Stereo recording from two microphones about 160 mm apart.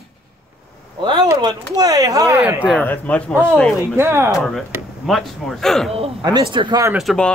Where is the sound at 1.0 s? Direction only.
30° right (ahead or behind).